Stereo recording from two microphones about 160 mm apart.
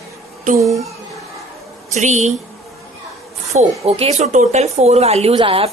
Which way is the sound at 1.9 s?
45° right (ahead or behind).